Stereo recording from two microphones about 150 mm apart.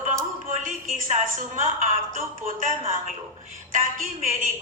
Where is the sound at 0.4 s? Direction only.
60° right (ahead or behind).